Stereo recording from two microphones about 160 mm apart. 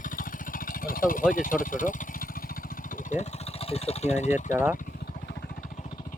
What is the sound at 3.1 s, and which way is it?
Speech, 45° left (ahead or behind).